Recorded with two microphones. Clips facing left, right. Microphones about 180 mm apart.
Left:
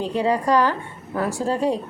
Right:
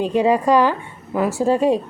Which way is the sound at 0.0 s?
15° right (ahead or behind).